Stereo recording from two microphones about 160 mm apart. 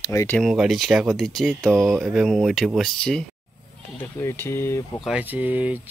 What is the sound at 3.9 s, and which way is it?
Speech, 15° left (ahead or behind).